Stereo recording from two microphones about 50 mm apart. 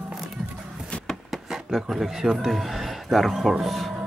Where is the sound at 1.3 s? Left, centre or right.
Centre.